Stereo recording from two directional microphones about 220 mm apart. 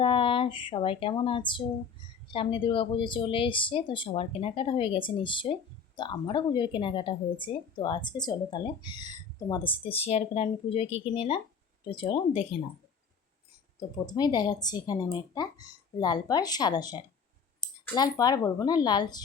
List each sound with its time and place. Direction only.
0.0 s a woman's voice: 25° left (ahead or behind)
13.7 s speech: 20° left (ahead or behind)